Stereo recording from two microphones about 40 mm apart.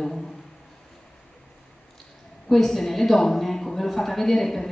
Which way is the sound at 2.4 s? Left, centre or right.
Centre.